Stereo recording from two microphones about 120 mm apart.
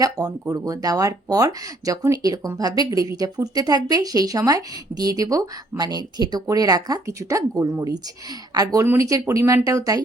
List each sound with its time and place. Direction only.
0.0 s speech: 30° right (ahead or behind)